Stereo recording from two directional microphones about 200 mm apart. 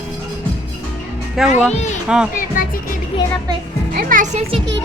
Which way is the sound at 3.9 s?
45° right (ahead or behind).